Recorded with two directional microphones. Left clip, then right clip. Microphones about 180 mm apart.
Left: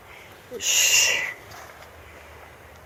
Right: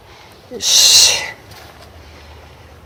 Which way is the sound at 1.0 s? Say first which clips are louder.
Right 9 dB; 20° right (ahead or behind).